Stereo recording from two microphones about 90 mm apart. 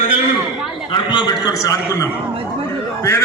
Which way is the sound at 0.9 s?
60° left (ahead or behind).